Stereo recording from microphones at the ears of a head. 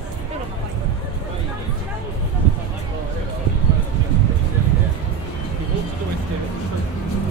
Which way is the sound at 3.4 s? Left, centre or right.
Right.